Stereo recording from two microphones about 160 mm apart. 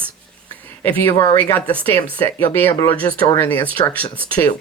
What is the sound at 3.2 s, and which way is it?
Speech, 20° left (ahead or behind).